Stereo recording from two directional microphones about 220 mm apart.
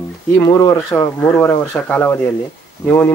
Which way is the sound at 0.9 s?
10° left (ahead or behind).